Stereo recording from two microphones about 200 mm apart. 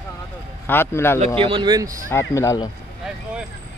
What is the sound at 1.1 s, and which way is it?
Speech, 25° right (ahead or behind).